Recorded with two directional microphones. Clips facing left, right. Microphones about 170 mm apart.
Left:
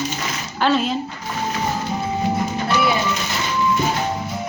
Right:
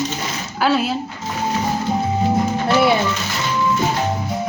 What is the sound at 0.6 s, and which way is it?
Speech, 5° right (ahead or behind).